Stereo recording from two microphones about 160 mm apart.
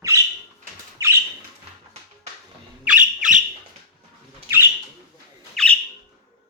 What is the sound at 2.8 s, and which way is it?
Squawk, 10° right (ahead or behind).